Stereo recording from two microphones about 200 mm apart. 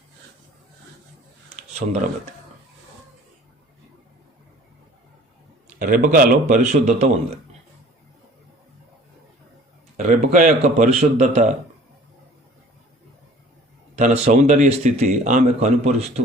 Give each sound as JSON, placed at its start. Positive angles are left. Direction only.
{"t": 1.8, "sound": "speech", "side_deg": -45}
{"t": 5.8, "sound": "speech", "side_deg": -45}
{"t": 10.0, "sound": "speech", "side_deg": -40}
{"t": 14.0, "sound": "speech", "side_deg": -35}